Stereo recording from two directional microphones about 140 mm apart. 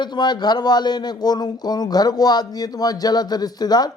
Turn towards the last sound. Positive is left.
turn(degrees=30)  # may be behind; listen again after turning